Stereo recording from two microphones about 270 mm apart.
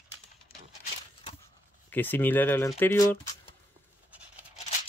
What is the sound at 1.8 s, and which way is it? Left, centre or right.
Speech, centre.